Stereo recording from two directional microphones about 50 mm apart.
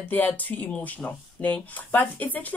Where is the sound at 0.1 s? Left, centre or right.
Left.